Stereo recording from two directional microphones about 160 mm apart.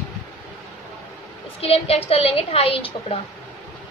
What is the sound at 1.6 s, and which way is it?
A woman's voice, 40° left (ahead or behind).